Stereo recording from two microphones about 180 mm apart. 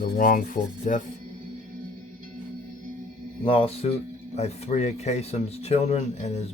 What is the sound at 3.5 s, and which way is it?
Speech, 30° left (ahead or behind).